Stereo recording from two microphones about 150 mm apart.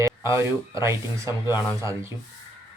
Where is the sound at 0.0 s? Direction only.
20° right (ahead or behind).